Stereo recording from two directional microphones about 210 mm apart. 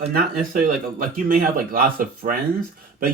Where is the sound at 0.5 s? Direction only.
40° right (ahead or behind).